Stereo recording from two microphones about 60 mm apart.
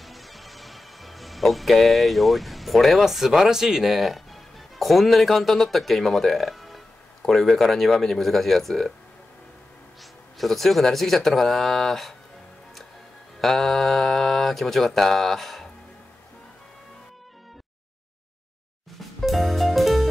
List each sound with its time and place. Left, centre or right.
0.0 s speech: centre
7.2 s mantra: centre
10.3 s mantra: centre
13.4 s mantra: centre
18.9 s music: centre